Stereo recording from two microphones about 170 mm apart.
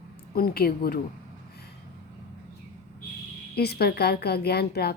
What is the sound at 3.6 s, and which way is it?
A woman's voice, 70° left (ahead or behind).